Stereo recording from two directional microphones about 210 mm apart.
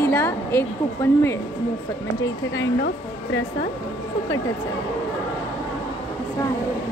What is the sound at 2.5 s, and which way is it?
Speech, 55° left (ahead or behind).